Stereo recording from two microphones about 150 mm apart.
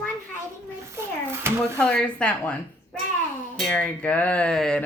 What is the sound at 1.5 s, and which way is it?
Speech, 15° right (ahead or behind).